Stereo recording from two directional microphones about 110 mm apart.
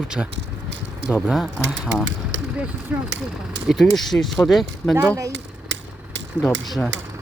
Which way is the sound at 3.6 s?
Centre (ahead or behind).